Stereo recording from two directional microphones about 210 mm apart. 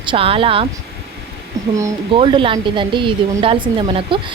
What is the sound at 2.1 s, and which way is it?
A woman's voice, 25° right (ahead or behind).